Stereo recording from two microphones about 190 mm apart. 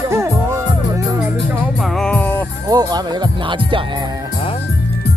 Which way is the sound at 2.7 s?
20° right (ahead or behind).